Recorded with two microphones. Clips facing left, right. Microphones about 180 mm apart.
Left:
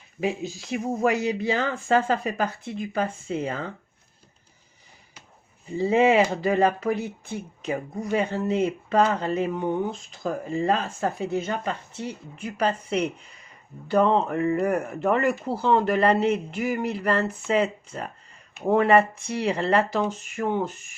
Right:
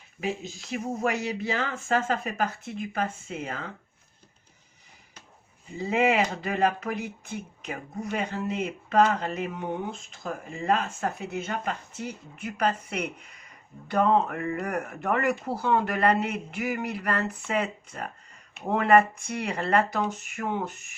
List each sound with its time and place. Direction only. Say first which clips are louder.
1.0 s speech: left 6 dB; 35° left (ahead or behind)
5.7 s speech: left 5 dB; 30° left (ahead or behind)